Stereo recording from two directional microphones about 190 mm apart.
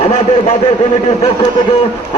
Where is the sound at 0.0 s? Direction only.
35° left (ahead or behind).